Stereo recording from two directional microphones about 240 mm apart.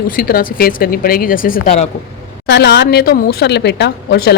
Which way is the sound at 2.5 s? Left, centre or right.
Left.